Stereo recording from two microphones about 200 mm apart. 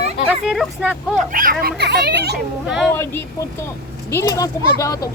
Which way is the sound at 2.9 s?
10° left (ahead or behind).